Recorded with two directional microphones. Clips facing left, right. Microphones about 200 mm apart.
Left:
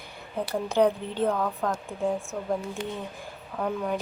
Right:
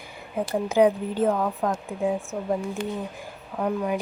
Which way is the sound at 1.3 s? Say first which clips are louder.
Right 3 dB; 20° right (ahead or behind).